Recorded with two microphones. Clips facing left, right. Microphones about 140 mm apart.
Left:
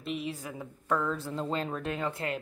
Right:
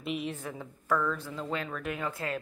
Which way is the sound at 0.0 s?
Centre (ahead or behind).